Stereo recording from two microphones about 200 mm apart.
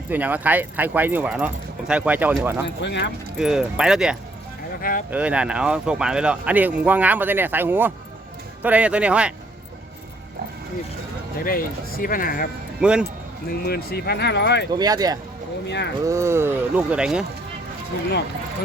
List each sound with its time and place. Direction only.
0.1 s speech: 10° right (ahead or behind)
2.8 s speech: 60° left (ahead or behind)
3.3 s speech: 5° right (ahead or behind)
4.8 s speech: 45° left (ahead or behind)
5.1 s speech: 5° right (ahead or behind)
11.4 s speech: 45° left (ahead or behind)
12.8 s speech: 5° right (ahead or behind)
13.7 s speech: 50° left (ahead or behind)
14.7 s speech: 20° right (ahead or behind)
15.6 s speech: 60° left (ahead or behind)
16.0 s speech: 15° right (ahead or behind)